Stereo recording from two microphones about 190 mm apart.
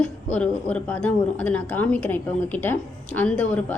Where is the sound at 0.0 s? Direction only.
5° left (ahead or behind).